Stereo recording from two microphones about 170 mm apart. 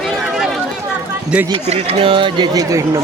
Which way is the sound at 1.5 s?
35° right (ahead or behind).